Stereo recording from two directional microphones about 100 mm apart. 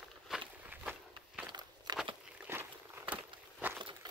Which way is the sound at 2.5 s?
20° right (ahead or behind).